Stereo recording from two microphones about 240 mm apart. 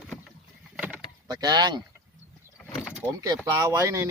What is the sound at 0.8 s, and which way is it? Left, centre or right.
Vehicle, centre.